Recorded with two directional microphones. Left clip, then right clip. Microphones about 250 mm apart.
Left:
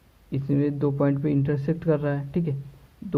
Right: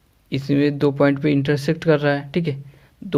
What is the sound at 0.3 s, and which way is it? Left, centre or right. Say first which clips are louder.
Speech: right 6 dB; right.